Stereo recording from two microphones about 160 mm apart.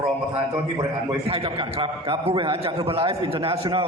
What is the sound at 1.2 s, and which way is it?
A man's voice, 35° right (ahead or behind).